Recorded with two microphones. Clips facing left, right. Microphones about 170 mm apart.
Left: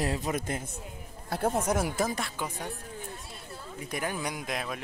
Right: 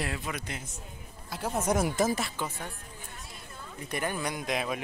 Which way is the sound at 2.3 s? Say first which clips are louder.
Left 1 dB; 15° left (ahead or behind).